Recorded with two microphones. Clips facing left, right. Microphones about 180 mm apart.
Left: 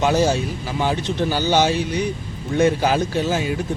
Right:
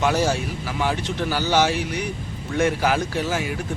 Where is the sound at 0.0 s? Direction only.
20° left (ahead or behind).